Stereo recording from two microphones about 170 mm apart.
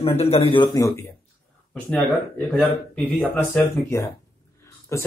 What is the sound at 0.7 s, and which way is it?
Speech, 20° left (ahead or behind).